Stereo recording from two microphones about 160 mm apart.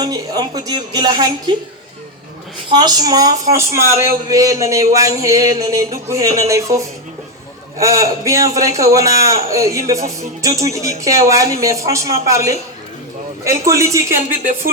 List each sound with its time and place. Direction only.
0.0 s a woman's voice: 25° right (ahead or behind)
2.6 s a woman's voice: 25° right (ahead or behind)